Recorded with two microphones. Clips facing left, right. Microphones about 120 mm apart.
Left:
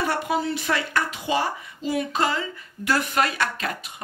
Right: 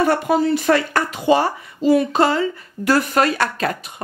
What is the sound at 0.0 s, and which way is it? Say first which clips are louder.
Speech: right 8 dB; 45° right (ahead or behind).